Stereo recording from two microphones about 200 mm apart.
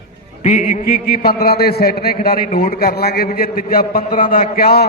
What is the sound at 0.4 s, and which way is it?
A man's voice, 40° left (ahead or behind).